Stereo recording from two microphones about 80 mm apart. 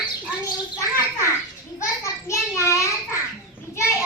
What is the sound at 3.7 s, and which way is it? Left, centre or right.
Children playing, left.